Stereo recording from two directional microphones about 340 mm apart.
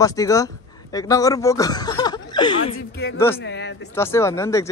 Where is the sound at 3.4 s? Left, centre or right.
Left.